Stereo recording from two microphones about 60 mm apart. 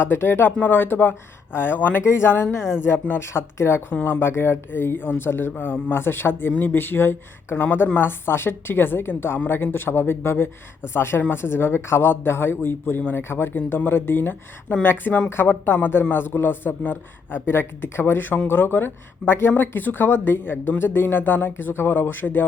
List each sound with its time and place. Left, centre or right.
0.0 s speech: left